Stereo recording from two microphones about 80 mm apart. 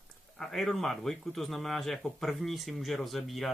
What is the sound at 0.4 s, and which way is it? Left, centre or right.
A man's voice, centre.